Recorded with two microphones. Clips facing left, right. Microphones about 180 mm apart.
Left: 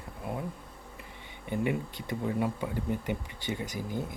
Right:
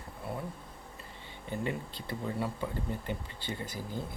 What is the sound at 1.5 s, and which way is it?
Speech, 15° left (ahead or behind).